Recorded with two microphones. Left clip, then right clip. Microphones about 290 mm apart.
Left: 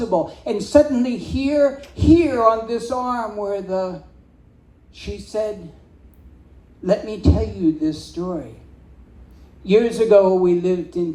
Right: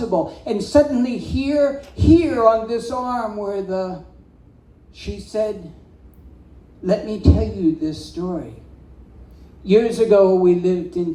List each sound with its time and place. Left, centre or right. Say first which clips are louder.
0.1 s speech: even; left
4.9 s speech: right 1 dB; left
6.8 s speech: even; left
9.6 s speech: even; left